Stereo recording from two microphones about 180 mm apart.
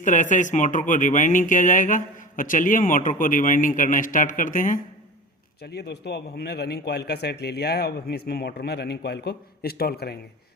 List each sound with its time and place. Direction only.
0.0 s speech: 45° left (ahead or behind)
5.6 s a man's voice: 65° left (ahead or behind)